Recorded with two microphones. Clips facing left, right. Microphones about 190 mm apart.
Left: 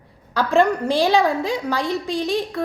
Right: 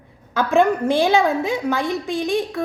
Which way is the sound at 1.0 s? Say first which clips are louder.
Left 1 dB; centre (ahead or behind).